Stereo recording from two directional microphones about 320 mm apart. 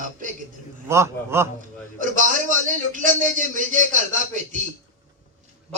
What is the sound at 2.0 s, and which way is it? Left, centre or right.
A man's voice, right.